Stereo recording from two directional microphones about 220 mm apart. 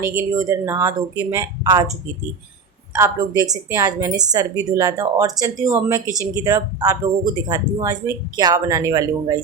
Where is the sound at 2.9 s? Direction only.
15° right (ahead or behind).